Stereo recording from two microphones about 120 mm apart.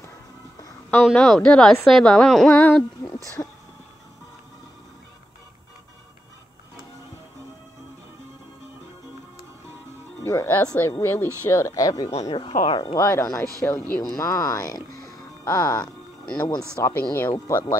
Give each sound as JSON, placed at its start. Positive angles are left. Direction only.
{"t": 1.1, "sound": "a woman's voice", "side_deg": 5}
{"t": 3.4, "sound": "speech", "side_deg": 35}
{"t": 10.2, "sound": "speech", "side_deg": 20}
{"t": 12.1, "sound": "speech", "side_deg": 60}
{"t": 12.6, "sound": "speech", "side_deg": 40}
{"t": 12.9, "sound": "speech", "side_deg": 25}
{"t": 13.6, "sound": "speech", "side_deg": 15}
{"t": 14.1, "sound": "speech", "side_deg": 30}